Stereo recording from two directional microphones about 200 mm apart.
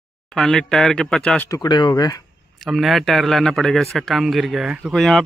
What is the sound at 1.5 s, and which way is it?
Speech, 20° left (ahead or behind).